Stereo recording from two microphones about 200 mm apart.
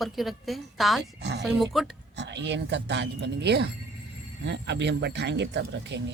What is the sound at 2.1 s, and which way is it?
Speech, 60° right (ahead or behind).